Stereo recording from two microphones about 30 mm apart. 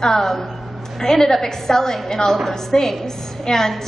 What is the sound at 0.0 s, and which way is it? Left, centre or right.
A woman's voice, centre.